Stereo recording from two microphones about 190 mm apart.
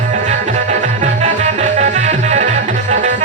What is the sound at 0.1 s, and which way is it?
Music, 35° right (ahead or behind).